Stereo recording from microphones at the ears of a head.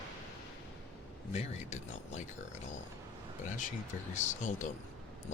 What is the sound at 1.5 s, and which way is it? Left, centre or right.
Speech, left.